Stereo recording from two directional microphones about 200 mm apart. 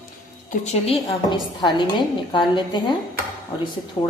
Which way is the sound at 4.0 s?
20° left (ahead or behind).